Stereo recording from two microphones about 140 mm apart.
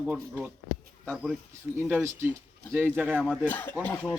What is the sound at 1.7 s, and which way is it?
Speech, 10° right (ahead or behind).